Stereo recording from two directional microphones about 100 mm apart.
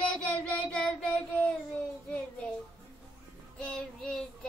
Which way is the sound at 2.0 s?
10° left (ahead or behind).